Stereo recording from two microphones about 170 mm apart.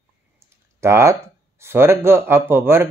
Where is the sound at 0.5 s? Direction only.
15° right (ahead or behind).